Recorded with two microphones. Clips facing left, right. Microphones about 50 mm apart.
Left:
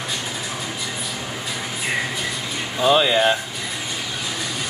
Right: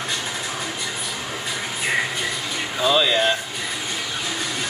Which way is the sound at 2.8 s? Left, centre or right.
Left.